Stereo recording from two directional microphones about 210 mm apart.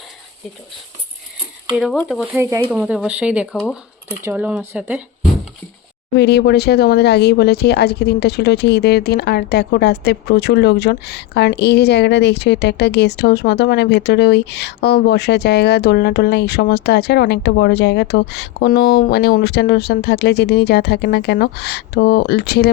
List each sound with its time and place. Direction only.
1.8 s speech: centre (ahead or behind)
2.4 s speech: 10° right (ahead or behind)
6.1 s speech: 55° left (ahead or behind)